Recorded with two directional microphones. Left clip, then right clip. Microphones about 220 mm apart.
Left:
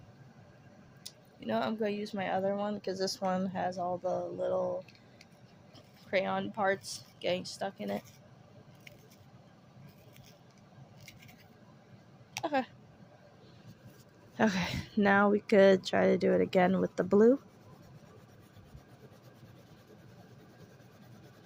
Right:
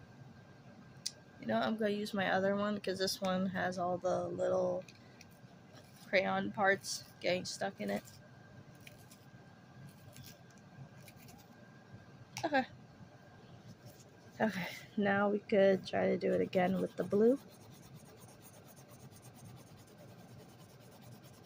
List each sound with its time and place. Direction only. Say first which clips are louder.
1.0 s speech: left 1 dB; 15° left (ahead or behind)
6.1 s speech: left 1 dB; 15° left (ahead or behind)
12.4 s a sound: left 1 dB; 15° left (ahead or behind)
14.3 s speech: left 6 dB; 35° left (ahead or behind)